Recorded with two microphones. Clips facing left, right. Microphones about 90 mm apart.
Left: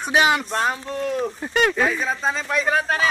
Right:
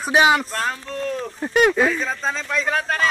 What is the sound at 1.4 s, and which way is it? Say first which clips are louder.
Speech: right 5 dB; 5° right (ahead or behind).